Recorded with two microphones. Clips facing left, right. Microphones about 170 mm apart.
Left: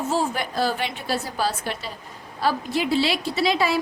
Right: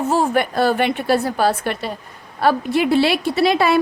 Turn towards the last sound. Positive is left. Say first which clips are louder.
# right 6 dB
turn(degrees=-60)  # may be behind; listen again after turning